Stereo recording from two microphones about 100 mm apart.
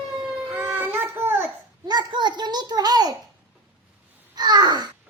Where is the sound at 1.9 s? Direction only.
50° right (ahead or behind).